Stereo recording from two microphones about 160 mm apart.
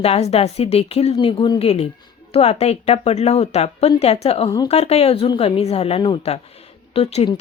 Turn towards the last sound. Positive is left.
turn(degrees=40)  # may be behind; listen again after turning